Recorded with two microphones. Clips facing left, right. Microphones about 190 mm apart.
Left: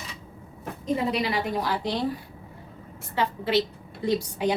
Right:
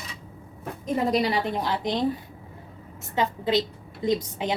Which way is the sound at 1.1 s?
35° right (ahead or behind).